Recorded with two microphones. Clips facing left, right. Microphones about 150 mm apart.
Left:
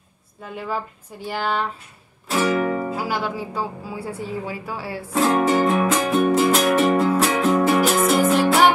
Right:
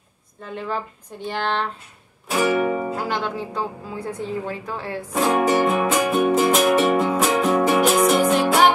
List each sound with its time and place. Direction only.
0.4 s a woman's voice: 10° left (ahead or behind)
2.3 s music: 10° right (ahead or behind)
3.0 s a woman's voice: 5° left (ahead or behind)
5.1 s music: 10° right (ahead or behind)
7.9 s music: centre (ahead or behind)